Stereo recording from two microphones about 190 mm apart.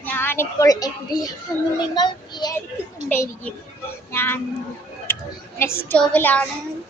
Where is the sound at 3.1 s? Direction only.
10° left (ahead or behind).